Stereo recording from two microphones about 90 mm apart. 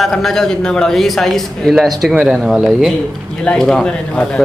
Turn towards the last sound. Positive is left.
turn(degrees=10)  # may be behind; listen again after turning